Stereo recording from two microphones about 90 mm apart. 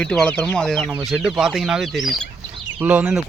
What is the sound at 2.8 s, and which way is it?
Speech, 20° right (ahead or behind).